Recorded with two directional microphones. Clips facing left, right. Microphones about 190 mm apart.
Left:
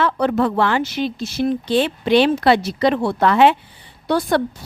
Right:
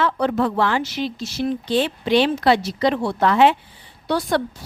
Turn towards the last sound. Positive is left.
turn(degrees=50)  # may be behind; listen again after turning